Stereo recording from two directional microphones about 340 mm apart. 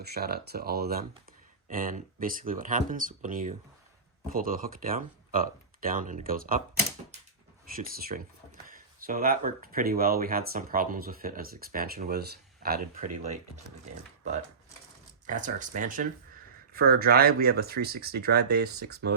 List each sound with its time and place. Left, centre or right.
0.0 s speech: right
7.8 s speech: right
15.3 s speech: right